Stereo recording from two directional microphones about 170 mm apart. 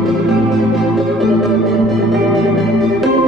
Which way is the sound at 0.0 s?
Centre (ahead or behind).